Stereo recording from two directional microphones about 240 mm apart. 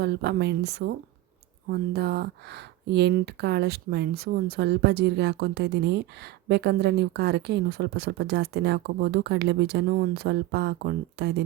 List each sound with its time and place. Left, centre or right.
0.0 s speech: right